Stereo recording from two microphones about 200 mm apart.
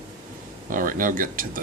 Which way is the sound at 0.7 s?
45° right (ahead or behind).